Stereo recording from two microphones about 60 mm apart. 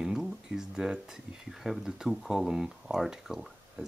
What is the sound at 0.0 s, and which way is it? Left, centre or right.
Speech, centre.